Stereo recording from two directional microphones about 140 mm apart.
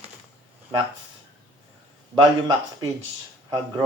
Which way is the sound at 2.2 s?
30° right (ahead or behind).